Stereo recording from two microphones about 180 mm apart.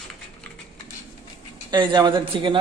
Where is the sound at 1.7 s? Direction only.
25° right (ahead or behind).